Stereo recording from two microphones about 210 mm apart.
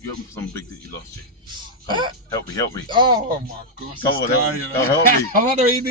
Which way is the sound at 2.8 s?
20° right (ahead or behind).